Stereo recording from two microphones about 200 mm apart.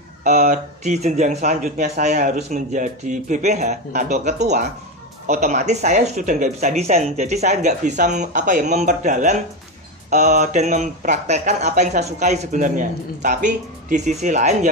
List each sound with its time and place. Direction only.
0.2 s speech: 35° right (ahead or behind)